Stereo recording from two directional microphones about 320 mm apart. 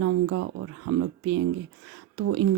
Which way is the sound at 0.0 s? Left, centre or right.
Right.